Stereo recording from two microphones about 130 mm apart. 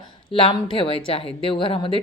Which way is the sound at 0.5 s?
40° left (ahead or behind).